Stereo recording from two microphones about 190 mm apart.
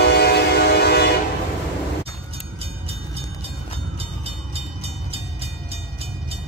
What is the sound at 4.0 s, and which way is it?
Train, 30° right (ahead or behind).